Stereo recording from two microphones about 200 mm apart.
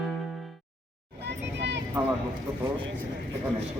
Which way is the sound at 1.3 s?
60° right (ahead or behind).